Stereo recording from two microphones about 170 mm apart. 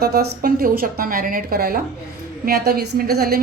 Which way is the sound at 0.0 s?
65° right (ahead or behind).